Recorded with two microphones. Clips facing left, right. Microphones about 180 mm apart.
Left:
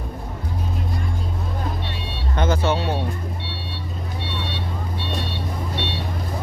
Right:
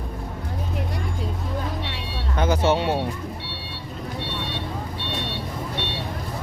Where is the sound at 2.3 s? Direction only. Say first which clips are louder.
Even; 10° right (ahead or behind).